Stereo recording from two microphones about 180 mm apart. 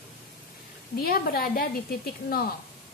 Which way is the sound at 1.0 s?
55° left (ahead or behind).